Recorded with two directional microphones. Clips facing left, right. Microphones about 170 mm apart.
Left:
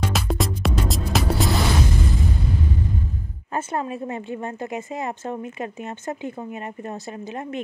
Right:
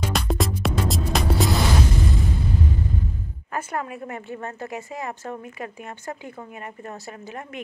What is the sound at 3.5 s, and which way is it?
A woman's voice, 25° left (ahead or behind).